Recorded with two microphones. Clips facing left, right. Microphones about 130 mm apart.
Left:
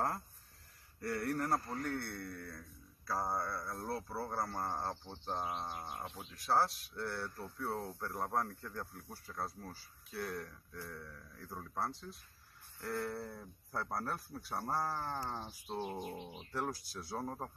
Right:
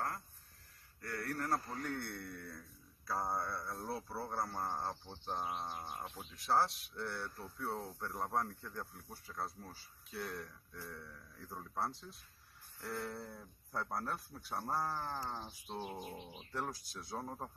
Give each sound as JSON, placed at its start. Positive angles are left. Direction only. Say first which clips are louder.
{"t": 1.0, "sound": "speech", "louder": "left 5 dB", "side_deg": 25}
{"t": 1.6, "sound": "speech", "louder": "left 2 dB", "side_deg": 0}